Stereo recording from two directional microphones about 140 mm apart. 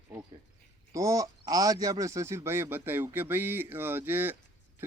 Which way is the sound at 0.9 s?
25° right (ahead or behind).